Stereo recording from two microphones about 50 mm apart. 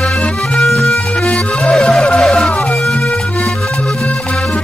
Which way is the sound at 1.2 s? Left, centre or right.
Left.